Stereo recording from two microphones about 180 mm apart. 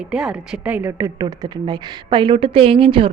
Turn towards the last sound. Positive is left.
turn(degrees=-30)  # may be behind; listen again after turning